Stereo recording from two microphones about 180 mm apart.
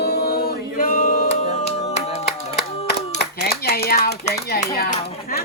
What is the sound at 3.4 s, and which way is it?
Clapping, 60° left (ahead or behind).